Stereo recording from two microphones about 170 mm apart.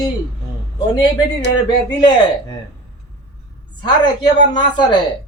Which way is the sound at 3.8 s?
25° left (ahead or behind).